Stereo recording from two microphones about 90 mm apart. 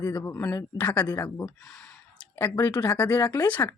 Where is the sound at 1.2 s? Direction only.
35° left (ahead or behind).